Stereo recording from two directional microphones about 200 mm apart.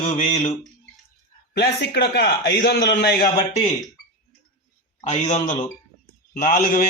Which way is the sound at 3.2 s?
20° left (ahead or behind).